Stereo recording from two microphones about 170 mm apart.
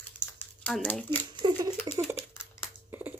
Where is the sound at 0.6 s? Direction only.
5° left (ahead or behind).